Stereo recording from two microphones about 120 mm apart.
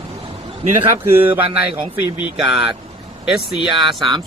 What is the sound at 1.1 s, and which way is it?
Speech, 20° right (ahead or behind).